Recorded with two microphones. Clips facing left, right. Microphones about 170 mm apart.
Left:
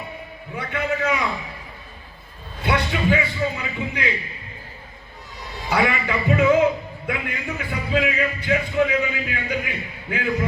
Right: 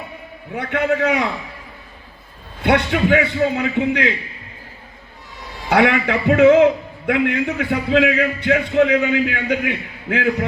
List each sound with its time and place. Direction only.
0.5 s a man's voice: 65° right (ahead or behind)
2.6 s a man's voice: 65° right (ahead or behind)
5.6 s a man's voice: 75° right (ahead or behind)